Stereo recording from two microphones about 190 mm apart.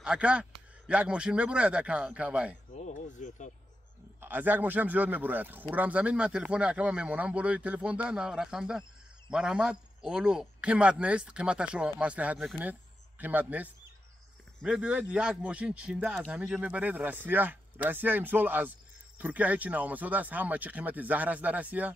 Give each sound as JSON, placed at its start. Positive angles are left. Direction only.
{"t": 0.0, "sound": "speech", "side_deg": -5}
{"t": 2.7, "sound": "speech", "side_deg": 40}
{"t": 4.2, "sound": "speech", "side_deg": -10}